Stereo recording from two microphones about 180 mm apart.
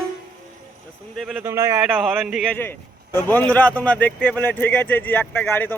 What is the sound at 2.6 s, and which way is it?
A man's voice, 10° left (ahead or behind).